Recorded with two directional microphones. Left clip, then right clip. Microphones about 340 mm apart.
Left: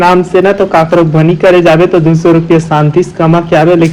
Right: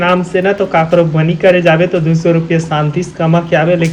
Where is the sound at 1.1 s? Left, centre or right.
Centre.